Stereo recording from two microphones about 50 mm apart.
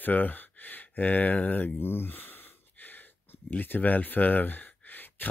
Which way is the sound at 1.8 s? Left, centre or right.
Left.